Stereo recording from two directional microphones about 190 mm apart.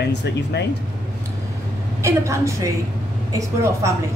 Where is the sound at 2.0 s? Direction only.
15° right (ahead or behind).